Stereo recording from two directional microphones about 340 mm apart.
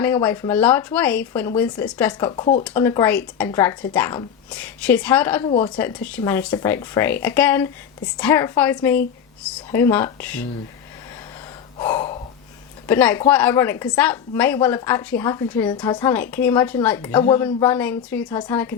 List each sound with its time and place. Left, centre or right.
0.0 s speech: centre
2.3 s a woman's voice: centre
5.5 s a woman's voice: centre
5.7 s a woman's voice: centre
11.8 s gasp: centre
12.9 s a woman's voice: centre